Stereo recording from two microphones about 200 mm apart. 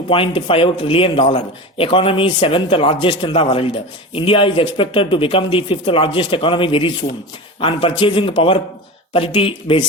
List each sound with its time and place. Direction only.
0.1 s speech: 25° left (ahead or behind)